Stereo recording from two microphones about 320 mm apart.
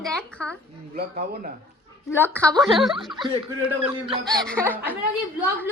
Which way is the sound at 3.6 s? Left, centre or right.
Centre.